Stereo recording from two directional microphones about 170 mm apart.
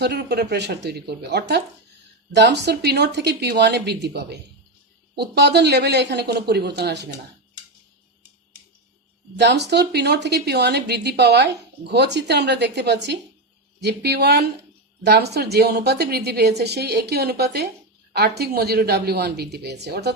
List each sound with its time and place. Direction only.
0.0 s a woman's voice: 75° right (ahead or behind)
9.4 s a woman's voice: 80° right